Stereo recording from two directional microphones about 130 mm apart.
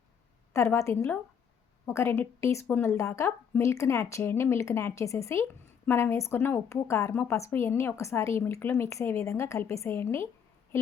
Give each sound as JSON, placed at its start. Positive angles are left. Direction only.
{"t": 0.5, "sound": "a woman's voice", "side_deg": 20}